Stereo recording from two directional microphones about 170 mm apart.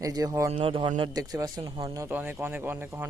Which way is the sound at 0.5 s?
30° right (ahead or behind).